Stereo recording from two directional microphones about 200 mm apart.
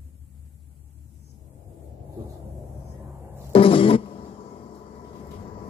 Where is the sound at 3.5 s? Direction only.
25° left (ahead or behind).